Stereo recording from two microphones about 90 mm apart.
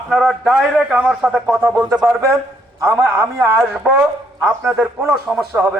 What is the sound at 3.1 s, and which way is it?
Speech, 25° right (ahead or behind).